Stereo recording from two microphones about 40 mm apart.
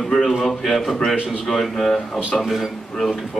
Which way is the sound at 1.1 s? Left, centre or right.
Right.